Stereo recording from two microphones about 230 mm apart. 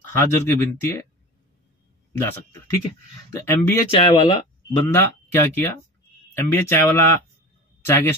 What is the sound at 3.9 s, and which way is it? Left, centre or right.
Speech, left.